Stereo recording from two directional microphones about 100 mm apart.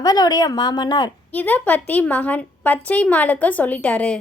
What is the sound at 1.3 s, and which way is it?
A woman's voice, 15° left (ahead or behind).